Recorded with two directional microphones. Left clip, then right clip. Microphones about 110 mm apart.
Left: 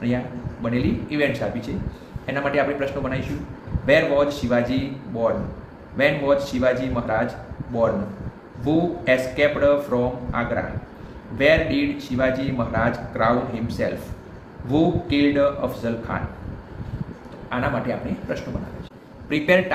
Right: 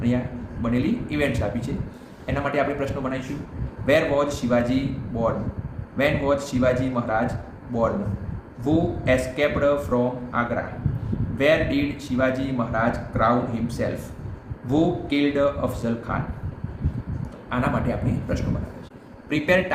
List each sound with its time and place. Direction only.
0.6 s speech: 15° right (ahead or behind)
8.6 s speech: 20° right (ahead or behind)
17.5 s speech: 25° right (ahead or behind)
19.3 s speech: 15° right (ahead or behind)